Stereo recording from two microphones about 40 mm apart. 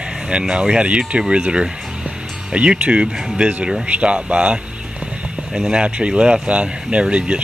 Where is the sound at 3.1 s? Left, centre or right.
Centre.